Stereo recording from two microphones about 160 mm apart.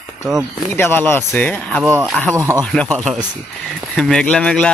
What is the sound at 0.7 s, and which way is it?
Speech, 15° left (ahead or behind).